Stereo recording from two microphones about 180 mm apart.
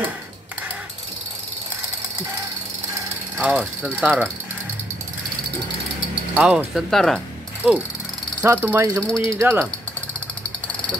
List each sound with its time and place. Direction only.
3.3 s speech: 5° right (ahead or behind)
6.3 s speech: 5° right (ahead or behind)